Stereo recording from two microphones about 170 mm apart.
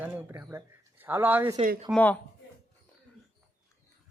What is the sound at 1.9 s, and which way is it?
Speech, 10° left (ahead or behind).